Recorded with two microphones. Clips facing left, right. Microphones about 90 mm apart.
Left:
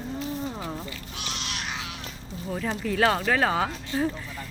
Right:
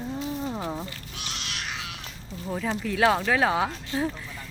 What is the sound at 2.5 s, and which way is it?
Speech, centre (ahead or behind).